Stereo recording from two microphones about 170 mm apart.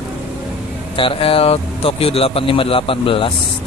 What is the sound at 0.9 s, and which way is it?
A man's voice, 30° left (ahead or behind).